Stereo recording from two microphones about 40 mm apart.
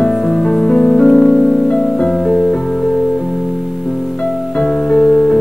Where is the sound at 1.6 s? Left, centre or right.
Left.